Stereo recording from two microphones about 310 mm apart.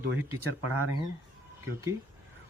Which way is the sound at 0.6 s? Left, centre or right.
Right.